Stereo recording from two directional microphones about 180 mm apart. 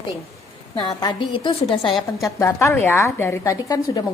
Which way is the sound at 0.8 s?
25° left (ahead or behind).